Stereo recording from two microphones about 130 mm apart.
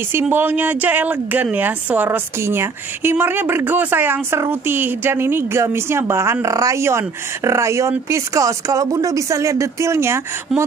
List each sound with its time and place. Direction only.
0.1 s a woman's voice: 15° right (ahead or behind)
10.5 s speech: 5° right (ahead or behind)